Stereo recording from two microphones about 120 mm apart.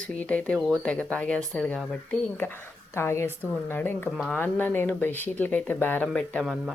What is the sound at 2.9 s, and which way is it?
A woman's voice, 20° left (ahead or behind).